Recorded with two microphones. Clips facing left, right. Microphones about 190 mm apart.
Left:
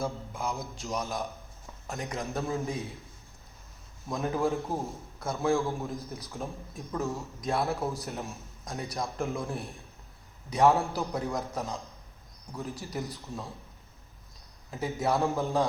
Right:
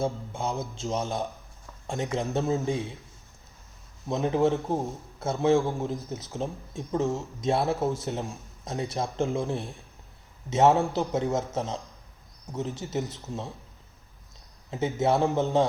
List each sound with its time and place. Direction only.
0.0 s speech: 30° right (ahead or behind)
4.1 s speech: 25° right (ahead or behind)
14.7 s speech: 20° right (ahead or behind)